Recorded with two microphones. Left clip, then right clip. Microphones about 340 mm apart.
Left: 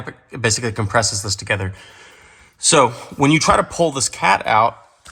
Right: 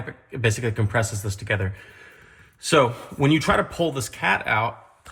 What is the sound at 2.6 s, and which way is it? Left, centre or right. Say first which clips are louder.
Speech: left 5 dB; centre.